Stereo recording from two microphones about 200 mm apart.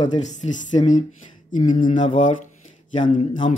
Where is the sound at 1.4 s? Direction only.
40° left (ahead or behind).